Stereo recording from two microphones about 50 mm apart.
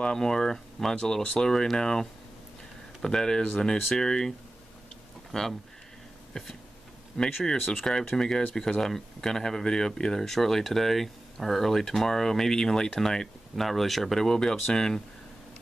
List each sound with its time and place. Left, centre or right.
0.0 s speech: centre
1.2 s speech: left
1.5 s speech: centre
5.3 s speech: centre
7.2 s speech: left
7.8 s speech: centre